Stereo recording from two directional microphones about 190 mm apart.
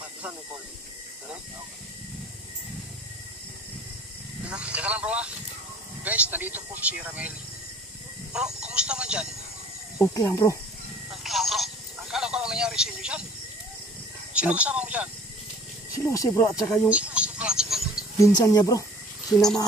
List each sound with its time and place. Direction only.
4.5 s speech: 5° right (ahead or behind)
8.6 s speech: 5° right (ahead or behind)
9.9 s speech: 15° left (ahead or behind)
11.2 s telephone: centre (ahead or behind)
14.3 s speech: 5° right (ahead or behind)
16.0 s speech: 15° left (ahead or behind)
16.9 s a sound: 5° right (ahead or behind)
18.2 s speech: 15° left (ahead or behind)
19.3 s speech: centre (ahead or behind)